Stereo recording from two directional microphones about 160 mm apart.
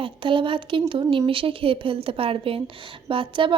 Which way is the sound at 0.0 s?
30° right (ahead or behind).